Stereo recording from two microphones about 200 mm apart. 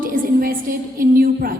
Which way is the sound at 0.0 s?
45° right (ahead or behind).